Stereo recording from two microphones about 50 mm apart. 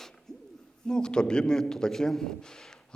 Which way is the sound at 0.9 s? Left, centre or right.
Centre.